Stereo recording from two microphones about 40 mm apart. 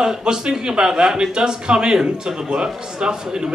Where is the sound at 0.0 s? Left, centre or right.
Centre.